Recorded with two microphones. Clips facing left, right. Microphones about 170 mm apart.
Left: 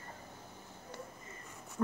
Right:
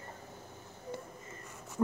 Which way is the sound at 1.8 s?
20° right (ahead or behind).